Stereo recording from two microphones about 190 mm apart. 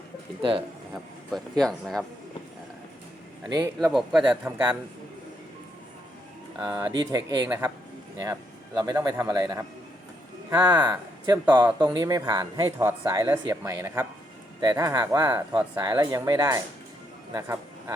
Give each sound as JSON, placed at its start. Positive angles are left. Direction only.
{"t": 1.3, "sound": "speech", "side_deg": 0}
{"t": 3.5, "sound": "speech", "side_deg": -15}
{"t": 6.6, "sound": "speech", "side_deg": -20}
{"t": 8.8, "sound": "a man's voice", "side_deg": -20}